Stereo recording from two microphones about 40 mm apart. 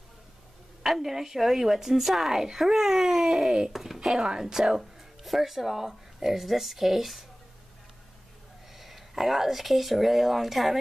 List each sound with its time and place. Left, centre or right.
0.8 s a woman's voice: centre
3.7 s a woman's voice: centre
5.2 s speech: centre
8.7 s speech: centre